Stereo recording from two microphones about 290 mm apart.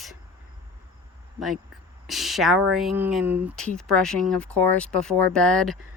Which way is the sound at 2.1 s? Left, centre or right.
Centre.